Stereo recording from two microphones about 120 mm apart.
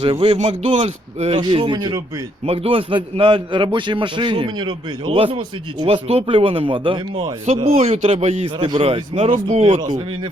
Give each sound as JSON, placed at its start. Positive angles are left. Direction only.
{"t": 0.0, "sound": "speech", "side_deg": -55}
{"t": 1.4, "sound": "a man's voice", "side_deg": -45}
{"t": 7.4, "sound": "speech", "side_deg": -65}
{"t": 8.6, "sound": "a man's voice", "side_deg": -45}
{"t": 9.6, "sound": "speech", "side_deg": -80}